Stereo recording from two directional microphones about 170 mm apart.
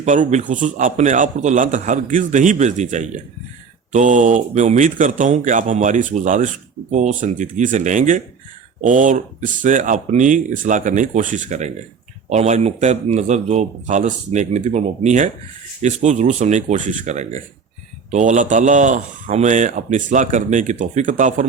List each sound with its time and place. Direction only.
0.0 s speech: 45° right (ahead or behind)